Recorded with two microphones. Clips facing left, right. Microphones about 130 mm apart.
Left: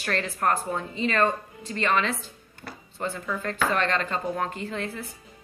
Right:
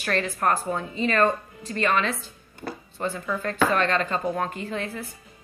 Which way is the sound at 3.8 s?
15° right (ahead or behind).